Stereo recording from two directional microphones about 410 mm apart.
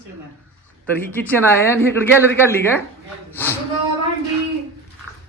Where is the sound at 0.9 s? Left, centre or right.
Centre.